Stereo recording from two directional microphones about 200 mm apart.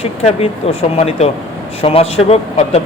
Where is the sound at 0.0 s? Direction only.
30° left (ahead or behind).